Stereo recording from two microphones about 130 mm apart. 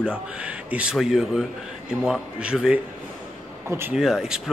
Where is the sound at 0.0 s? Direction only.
10° right (ahead or behind).